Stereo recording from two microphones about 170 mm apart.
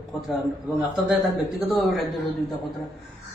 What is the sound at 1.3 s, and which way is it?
Speech, centre (ahead or behind).